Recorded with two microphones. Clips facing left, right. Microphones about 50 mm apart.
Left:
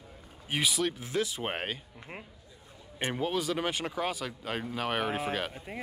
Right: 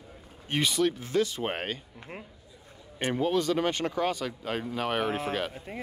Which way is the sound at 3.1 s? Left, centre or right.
Centre.